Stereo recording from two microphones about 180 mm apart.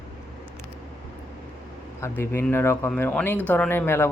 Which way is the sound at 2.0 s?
15° left (ahead or behind).